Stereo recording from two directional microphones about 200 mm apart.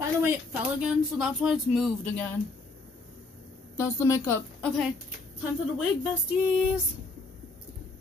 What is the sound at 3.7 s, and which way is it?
Speech, 15° left (ahead or behind).